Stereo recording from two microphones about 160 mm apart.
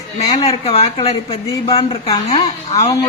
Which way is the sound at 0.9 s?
40° left (ahead or behind).